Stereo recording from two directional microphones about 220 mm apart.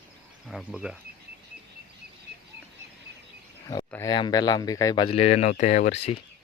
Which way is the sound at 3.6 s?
15° left (ahead or behind).